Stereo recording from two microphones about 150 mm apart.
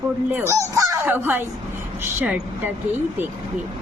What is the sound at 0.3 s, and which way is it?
A woman's voice, 15° right (ahead or behind).